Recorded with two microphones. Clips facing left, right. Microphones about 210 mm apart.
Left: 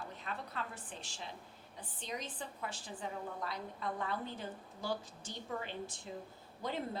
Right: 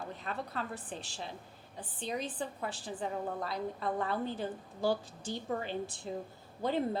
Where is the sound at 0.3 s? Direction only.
35° right (ahead or behind).